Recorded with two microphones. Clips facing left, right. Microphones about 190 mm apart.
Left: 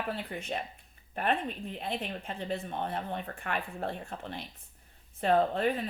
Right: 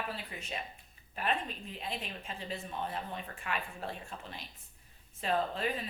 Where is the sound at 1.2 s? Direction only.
60° left (ahead or behind).